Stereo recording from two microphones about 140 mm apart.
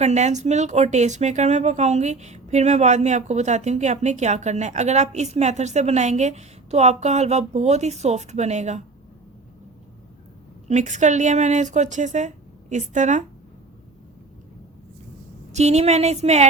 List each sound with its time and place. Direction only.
0.0 s speech: 55° right (ahead or behind)
10.7 s speech: 60° right (ahead or behind)
15.5 s speech: 50° right (ahead or behind)